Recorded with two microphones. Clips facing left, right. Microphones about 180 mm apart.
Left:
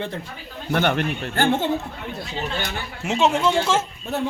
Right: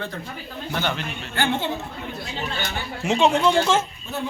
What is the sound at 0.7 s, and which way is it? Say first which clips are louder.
A man's voice: left 7 dB; 55° left (ahead or behind).